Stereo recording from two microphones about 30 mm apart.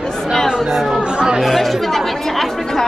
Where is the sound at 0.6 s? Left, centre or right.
Centre.